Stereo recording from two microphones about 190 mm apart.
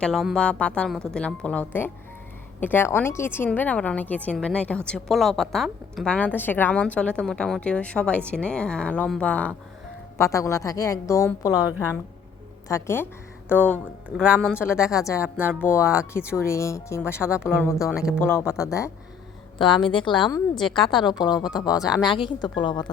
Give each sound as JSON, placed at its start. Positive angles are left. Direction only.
{"t": 0.0, "sound": "a woman's voice", "side_deg": 0}
{"t": 14.2, "sound": "a woman's voice", "side_deg": -5}
{"t": 14.9, "sound": "speech", "side_deg": 15}
{"t": 15.2, "sound": "speech", "side_deg": -10}
{"t": 15.6, "sound": "speech", "side_deg": 15}
{"t": 17.8, "sound": "a woman's voice", "side_deg": -5}
{"t": 18.2, "sound": "a woman's voice", "side_deg": 10}